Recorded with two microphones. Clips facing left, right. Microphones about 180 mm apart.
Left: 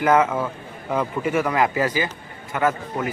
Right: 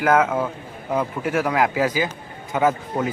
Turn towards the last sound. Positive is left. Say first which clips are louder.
# right 2 dB
turn(degrees=-15)  # may be behind; listen again after turning